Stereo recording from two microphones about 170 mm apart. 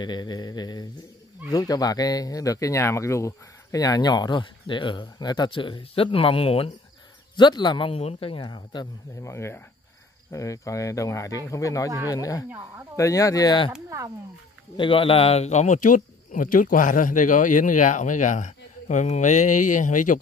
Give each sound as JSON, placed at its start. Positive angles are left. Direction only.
{"t": 0.0, "sound": "speech", "side_deg": 25}
{"t": 8.4, "sound": "speech", "side_deg": 25}
{"t": 12.4, "sound": "speech", "side_deg": -15}
{"t": 12.9, "sound": "speech", "side_deg": 20}
{"t": 13.8, "sound": "speech", "side_deg": -20}
{"t": 14.8, "sound": "speech", "side_deg": 30}